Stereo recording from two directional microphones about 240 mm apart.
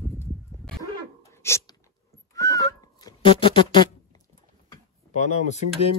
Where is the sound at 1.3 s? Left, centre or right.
Centre.